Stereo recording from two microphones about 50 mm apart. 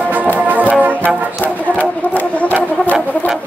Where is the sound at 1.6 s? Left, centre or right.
Left.